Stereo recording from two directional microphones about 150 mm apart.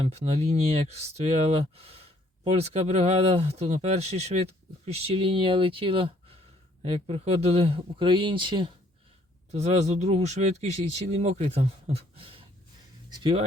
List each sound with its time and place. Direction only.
0.0 s speech: 45° right (ahead or behind)
9.5 s speech: 45° right (ahead or behind); by 13.3 s 30° right (ahead or behind)